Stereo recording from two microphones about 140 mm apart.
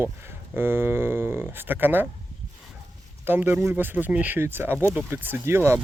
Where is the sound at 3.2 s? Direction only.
15° right (ahead or behind).